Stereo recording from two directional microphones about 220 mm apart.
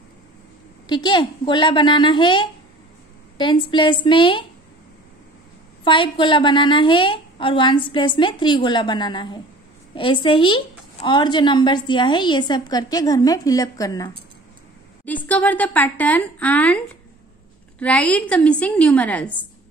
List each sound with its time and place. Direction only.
0.8 s a woman's voice: 20° left (ahead or behind)
5.9 s a woman's voice: 20° left (ahead or behind)
15.2 s a woman's voice: 5° left (ahead or behind)